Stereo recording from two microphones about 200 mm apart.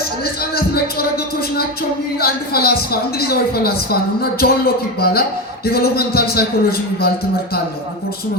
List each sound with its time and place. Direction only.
0.5 s a woman's voice: 50° left (ahead or behind)